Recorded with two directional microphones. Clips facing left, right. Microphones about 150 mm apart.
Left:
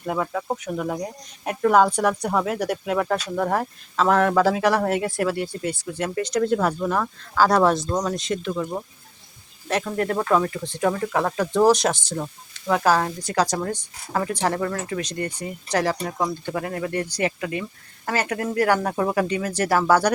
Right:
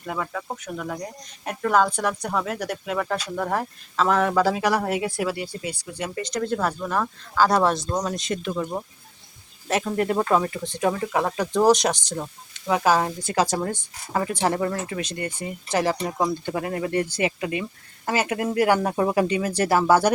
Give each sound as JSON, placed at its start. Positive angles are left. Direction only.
{"t": 0.0, "sound": "speech", "side_deg": 10}
{"t": 6.2, "sound": "speech", "side_deg": 10}